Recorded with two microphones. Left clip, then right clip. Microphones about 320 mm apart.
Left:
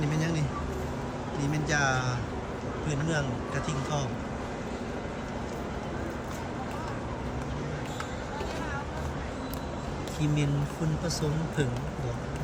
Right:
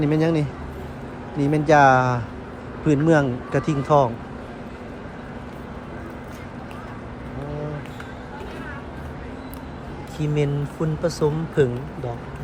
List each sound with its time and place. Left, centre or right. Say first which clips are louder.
0.0 s speech: right 11 dB; centre
10.2 s speech: right 8 dB; centre